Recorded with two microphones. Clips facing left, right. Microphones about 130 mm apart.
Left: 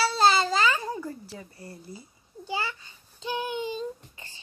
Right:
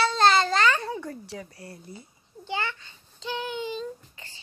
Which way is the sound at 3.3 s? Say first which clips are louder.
Left 1 dB; 15° left (ahead or behind).